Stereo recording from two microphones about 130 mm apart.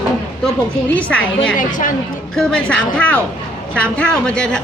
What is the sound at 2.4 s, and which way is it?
Speech, 10° left (ahead or behind).